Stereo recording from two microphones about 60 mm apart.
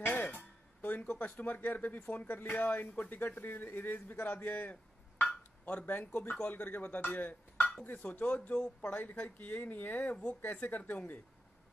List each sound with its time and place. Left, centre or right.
0.0 s music: left
1.2 s a man's voice: left